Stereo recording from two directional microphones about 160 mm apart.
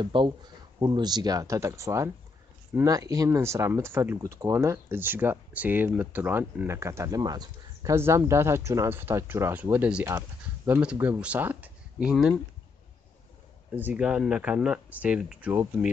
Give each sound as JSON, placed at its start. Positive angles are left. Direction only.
{"t": 0.0, "sound": "speech", "side_deg": -30}
{"t": 13.7, "sound": "speech", "side_deg": -10}